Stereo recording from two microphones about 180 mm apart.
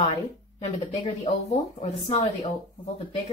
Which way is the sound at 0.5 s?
35° left (ahead or behind).